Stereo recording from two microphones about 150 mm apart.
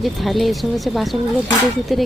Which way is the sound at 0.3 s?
Centre (ahead or behind).